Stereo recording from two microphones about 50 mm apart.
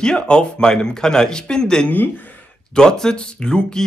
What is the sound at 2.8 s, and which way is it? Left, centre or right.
Speech, centre.